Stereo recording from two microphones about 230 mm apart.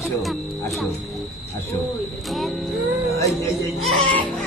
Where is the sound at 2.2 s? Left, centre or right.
Centre.